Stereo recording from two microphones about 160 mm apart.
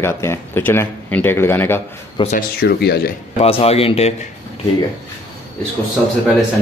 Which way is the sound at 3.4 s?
40° left (ahead or behind).